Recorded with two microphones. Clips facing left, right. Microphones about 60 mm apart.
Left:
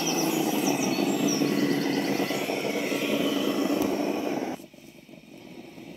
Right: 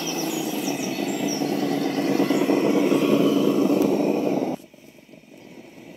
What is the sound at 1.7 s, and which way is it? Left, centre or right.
Vehicle, centre.